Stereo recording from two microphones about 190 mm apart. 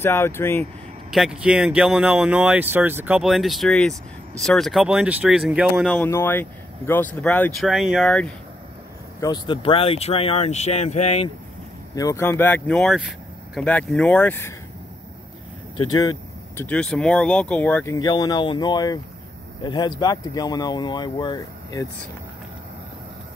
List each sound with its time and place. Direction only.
0.0 s speech: 15° left (ahead or behind)
1.1 s speech: 5° right (ahead or behind)
5.9 s speech: 10° left (ahead or behind)
9.2 s speech: 25° left (ahead or behind)
11.9 s speech: 20° left (ahead or behind)
15.9 s vehicle: 20° left (ahead or behind)
16.6 s speech: 5° left (ahead or behind); by 21.8 s 20° left (ahead or behind)